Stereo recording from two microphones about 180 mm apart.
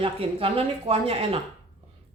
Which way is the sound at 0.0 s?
30° right (ahead or behind).